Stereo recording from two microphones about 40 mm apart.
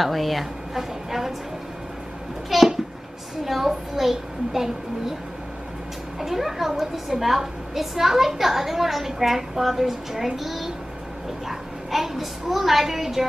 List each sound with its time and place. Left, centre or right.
0.0 s a woman's voice: centre
2.5 s babbling: centre
3.4 s a child's voice: centre
6.1 s a woman's voice: centre